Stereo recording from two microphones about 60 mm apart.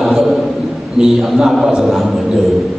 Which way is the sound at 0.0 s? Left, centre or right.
Centre.